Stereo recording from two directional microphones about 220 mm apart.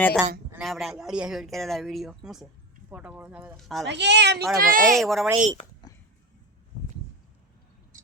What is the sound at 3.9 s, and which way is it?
Speech, 50° right (ahead or behind).